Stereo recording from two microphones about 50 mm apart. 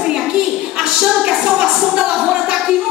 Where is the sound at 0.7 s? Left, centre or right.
Centre.